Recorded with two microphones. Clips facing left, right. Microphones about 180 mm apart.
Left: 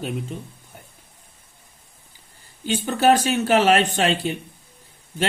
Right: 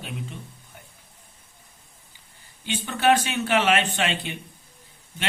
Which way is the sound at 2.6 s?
40° left (ahead or behind).